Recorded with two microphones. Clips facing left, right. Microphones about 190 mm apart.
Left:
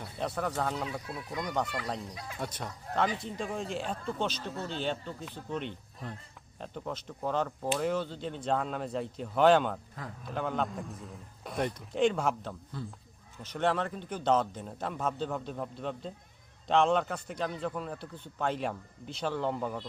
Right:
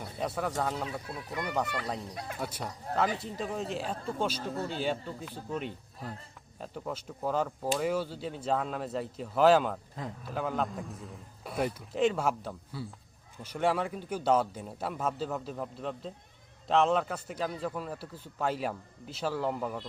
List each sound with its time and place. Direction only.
0.2 s a man's voice: 5° right (ahead or behind)
2.1 s speech: 55° right (ahead or behind)
2.4 s a man's voice: 5° right (ahead or behind)